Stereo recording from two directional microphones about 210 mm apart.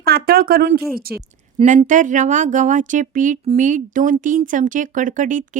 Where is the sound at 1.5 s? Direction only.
30° right (ahead or behind).